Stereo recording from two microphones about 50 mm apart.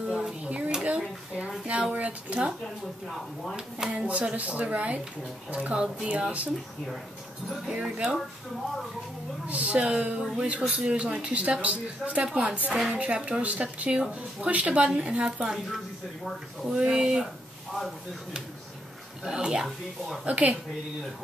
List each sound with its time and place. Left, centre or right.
0.1 s a sound: right
1.7 s speech: right
3.9 s speech: centre
7.7 s speech: centre
9.5 s speech: right
16.6 s speech: centre
19.2 s speech: centre
20.2 s speech: right